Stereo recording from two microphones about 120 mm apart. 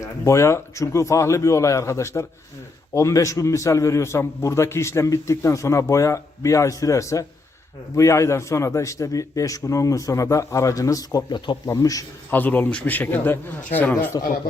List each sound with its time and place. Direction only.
0.0 s a man's voice: 25° left (ahead or behind)
12.3 s a man's voice: 15° left (ahead or behind)